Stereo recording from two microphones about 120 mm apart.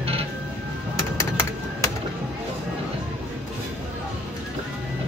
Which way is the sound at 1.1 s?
25° left (ahead or behind).